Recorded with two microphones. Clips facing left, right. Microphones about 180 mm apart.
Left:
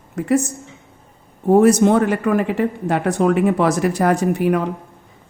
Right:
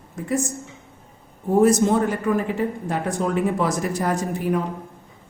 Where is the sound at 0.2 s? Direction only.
70° left (ahead or behind).